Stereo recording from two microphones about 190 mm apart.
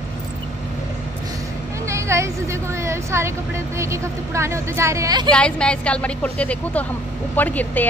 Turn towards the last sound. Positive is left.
turn(degrees=10)  # may be behind; listen again after turning